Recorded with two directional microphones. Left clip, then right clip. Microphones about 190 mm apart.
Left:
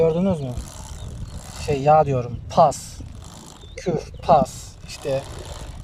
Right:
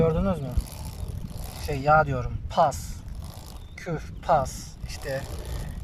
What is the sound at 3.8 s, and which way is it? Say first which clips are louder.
Speech: left 9 dB; 20° left (ahead or behind).